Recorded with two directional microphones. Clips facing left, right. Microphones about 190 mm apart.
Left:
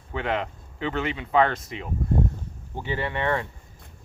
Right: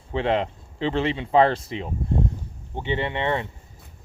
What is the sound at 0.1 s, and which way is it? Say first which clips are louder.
Speech: right 5 dB; 30° right (ahead or behind).